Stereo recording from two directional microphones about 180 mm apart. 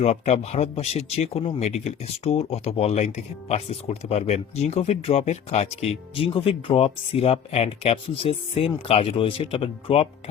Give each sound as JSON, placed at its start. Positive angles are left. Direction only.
{"t": 0.0, "sound": "speech", "side_deg": 35}